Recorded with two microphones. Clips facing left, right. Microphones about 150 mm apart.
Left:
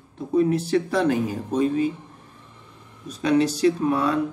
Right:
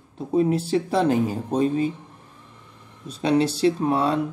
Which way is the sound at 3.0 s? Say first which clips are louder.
Even; 30° right (ahead or behind).